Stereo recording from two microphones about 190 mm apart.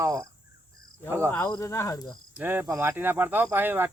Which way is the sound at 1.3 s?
15° left (ahead or behind).